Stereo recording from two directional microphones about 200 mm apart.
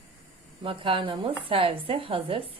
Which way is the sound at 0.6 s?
25° right (ahead or behind).